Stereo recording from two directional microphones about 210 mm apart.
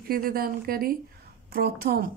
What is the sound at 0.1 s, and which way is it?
Speech, 45° right (ahead or behind).